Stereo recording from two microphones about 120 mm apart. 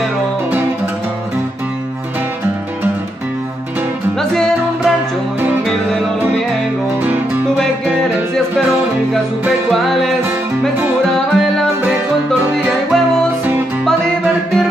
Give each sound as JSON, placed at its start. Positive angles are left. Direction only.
{"t": 4.2, "sound": "music", "side_deg": 5}
{"t": 9.7, "sound": "music", "side_deg": 0}
{"t": 11.3, "sound": "music", "side_deg": 0}
{"t": 12.9, "sound": "music", "side_deg": 5}